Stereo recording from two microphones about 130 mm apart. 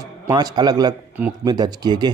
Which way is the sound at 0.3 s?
30° right (ahead or behind).